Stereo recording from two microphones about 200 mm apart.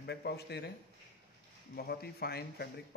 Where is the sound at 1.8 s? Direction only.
50° left (ahead or behind).